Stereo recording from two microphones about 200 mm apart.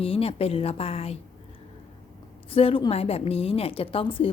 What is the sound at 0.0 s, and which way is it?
A woman's voice, 30° left (ahead or behind).